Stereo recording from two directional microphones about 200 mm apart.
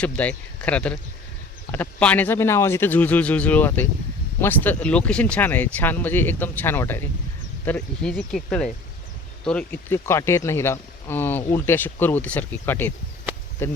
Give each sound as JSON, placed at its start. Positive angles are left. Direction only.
{"t": 0.0, "sound": "speech", "side_deg": 5}